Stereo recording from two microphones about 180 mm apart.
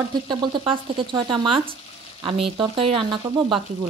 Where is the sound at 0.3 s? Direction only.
25° right (ahead or behind).